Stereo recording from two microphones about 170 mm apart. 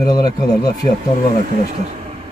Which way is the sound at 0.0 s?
20° left (ahead or behind).